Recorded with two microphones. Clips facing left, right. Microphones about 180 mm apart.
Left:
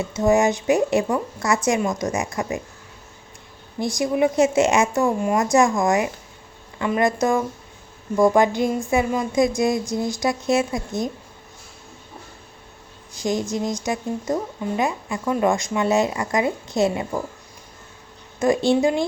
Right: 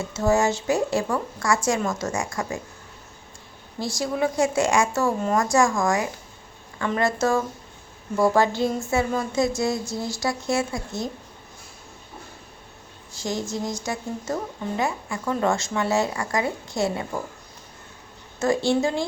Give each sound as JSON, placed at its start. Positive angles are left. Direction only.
{"t": 0.0, "sound": "speech", "side_deg": 15}
{"t": 3.8, "sound": "a woman's voice", "side_deg": 20}
{"t": 13.1, "sound": "speech", "side_deg": 20}
{"t": 18.3, "sound": "a woman's voice", "side_deg": 20}